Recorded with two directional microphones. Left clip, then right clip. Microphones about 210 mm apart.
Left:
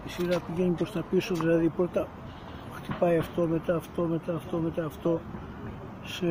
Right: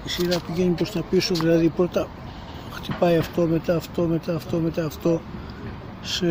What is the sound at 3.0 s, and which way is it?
Speech, 15° right (ahead or behind).